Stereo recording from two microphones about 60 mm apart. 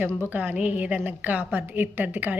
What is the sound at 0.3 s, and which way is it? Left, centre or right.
A woman's voice, right.